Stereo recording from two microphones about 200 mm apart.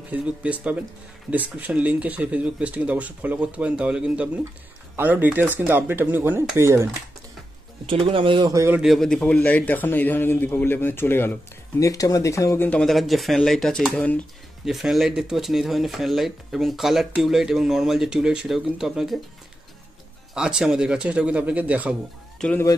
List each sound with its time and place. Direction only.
0.1 s speech: 5° right (ahead or behind)
7.8 s speech: 25° right (ahead or behind)
8.8 s a man's voice: centre (ahead or behind)
20.3 s speech: 5° right (ahead or behind)
22.4 s a man's voice: 5° left (ahead or behind)